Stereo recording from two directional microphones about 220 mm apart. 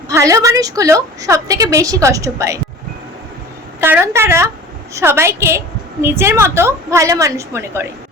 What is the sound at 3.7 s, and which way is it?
A woman's voice, 10° right (ahead or behind).